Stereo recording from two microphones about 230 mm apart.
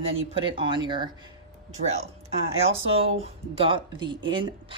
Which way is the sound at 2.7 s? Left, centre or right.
Right.